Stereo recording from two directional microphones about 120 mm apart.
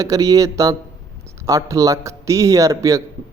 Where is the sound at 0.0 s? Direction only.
30° right (ahead or behind).